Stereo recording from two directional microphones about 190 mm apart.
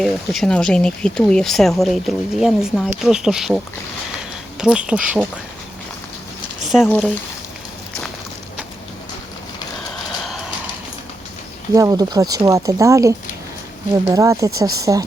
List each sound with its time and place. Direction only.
0.0 s speech: centre (ahead or behind)
6.8 s speech: 10° left (ahead or behind)
9.9 s a sound: centre (ahead or behind)
11.7 s speech: 20° right (ahead or behind)